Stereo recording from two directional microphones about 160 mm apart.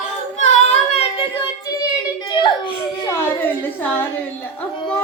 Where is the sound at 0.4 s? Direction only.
45° left (ahead or behind).